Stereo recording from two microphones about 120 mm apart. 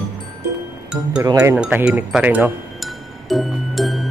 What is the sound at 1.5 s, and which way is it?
Speech, 10° right (ahead or behind).